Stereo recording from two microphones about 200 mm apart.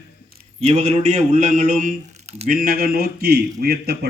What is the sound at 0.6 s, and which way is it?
Speech, 35° right (ahead or behind).